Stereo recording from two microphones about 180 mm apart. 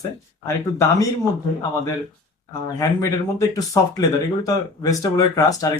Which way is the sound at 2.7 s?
20° left (ahead or behind).